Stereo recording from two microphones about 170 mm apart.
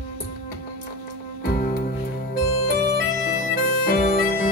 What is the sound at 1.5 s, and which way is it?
Music, 55° left (ahead or behind).